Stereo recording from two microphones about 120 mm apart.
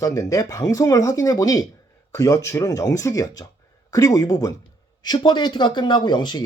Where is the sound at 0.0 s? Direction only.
30° left (ahead or behind).